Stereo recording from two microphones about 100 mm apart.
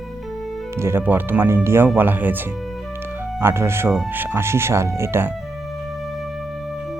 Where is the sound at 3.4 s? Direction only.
25° right (ahead or behind).